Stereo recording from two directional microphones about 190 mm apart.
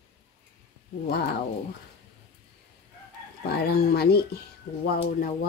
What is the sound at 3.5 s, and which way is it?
Speech, 55° left (ahead or behind).